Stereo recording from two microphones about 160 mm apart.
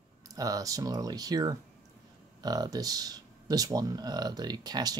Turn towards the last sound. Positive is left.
turn(degrees=-25)  # may be behind; listen again after turning